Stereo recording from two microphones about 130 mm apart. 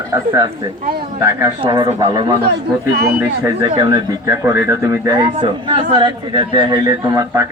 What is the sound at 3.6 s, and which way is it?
Speech, 40° right (ahead or behind).